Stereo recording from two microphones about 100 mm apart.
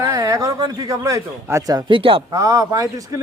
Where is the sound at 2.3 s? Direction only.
35° right (ahead or behind).